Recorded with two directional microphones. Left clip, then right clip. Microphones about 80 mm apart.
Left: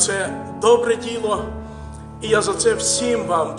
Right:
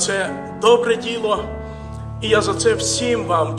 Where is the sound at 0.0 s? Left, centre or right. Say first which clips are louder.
Right 1 dB; right.